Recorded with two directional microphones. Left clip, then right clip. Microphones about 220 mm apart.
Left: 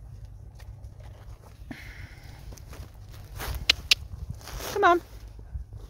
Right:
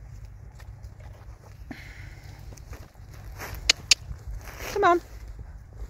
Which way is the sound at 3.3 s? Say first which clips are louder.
Left 1 dB; 15° left (ahead or behind).